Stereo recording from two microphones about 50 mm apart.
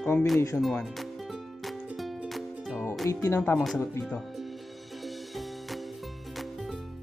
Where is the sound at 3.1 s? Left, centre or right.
Left.